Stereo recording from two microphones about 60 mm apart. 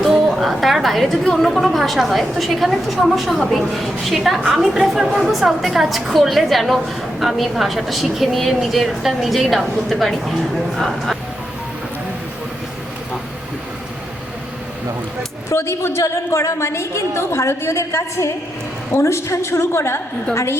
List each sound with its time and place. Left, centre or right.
0.0 s a woman's voice: centre
15.4 s a woman's voice: left